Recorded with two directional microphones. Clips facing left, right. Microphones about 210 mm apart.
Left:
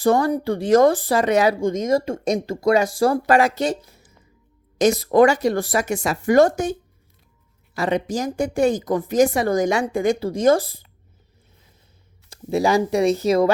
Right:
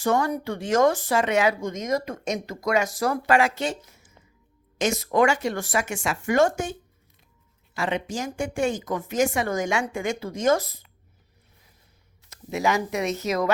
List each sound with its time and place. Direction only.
0.0 s speech: 35° left (ahead or behind)
7.8 s speech: 40° left (ahead or behind)
12.3 s speech: 35° left (ahead or behind)